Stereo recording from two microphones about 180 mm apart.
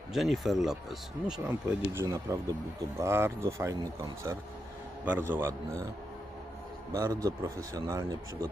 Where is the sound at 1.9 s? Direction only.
15° right (ahead or behind).